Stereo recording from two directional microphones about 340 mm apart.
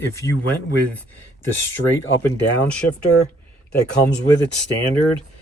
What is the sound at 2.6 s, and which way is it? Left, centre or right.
Speech, centre.